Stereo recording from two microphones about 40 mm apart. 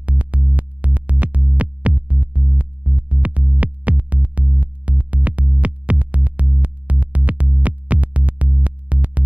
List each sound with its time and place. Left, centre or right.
0.2 s music: right